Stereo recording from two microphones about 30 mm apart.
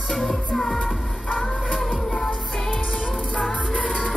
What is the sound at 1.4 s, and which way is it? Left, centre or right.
Music, centre.